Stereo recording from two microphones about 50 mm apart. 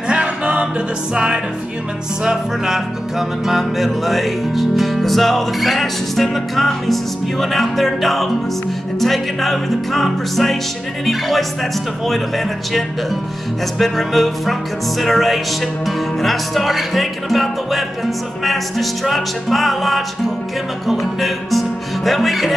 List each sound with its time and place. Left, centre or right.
0.1 s music: centre
13.7 s music: centre